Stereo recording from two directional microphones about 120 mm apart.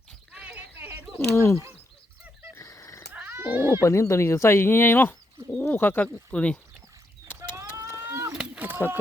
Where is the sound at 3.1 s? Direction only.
15° right (ahead or behind).